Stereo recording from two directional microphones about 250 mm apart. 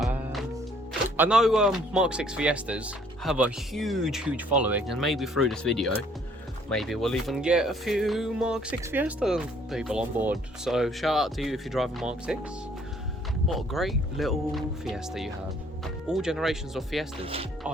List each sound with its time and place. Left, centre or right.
1.1 s speech: centre
13.5 s speech: centre